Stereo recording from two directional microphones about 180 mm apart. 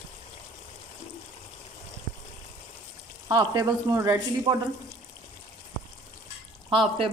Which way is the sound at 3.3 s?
20° right (ahead or behind).